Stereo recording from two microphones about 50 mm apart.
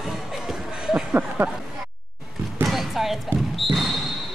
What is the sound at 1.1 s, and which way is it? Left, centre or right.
Speech, right.